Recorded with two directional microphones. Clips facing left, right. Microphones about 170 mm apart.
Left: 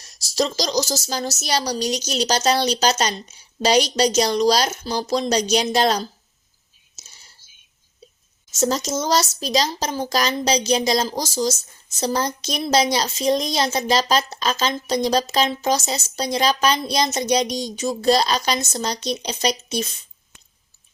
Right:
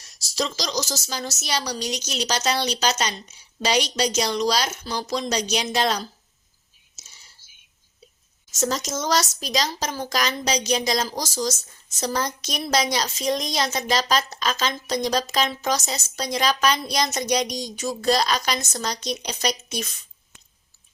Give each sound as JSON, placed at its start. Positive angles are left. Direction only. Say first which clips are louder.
{"t": 0.3, "sound": "speech", "louder": "left 5 dB", "side_deg": 40}
{"t": 8.5, "sound": "speech", "louder": "left 4 dB", "side_deg": 30}